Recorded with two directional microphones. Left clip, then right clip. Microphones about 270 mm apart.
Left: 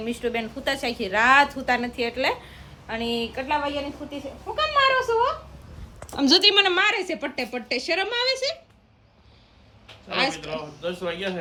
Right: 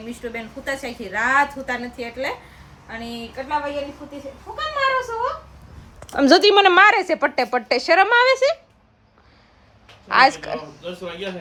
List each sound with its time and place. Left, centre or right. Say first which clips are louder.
0.3 s a woman's voice: left 1 dB; centre
6.3 s a woman's voice: right 5 dB; centre
7.7 s speech: right 10 dB; centre
9.8 s a man's voice: right 10 dB; centre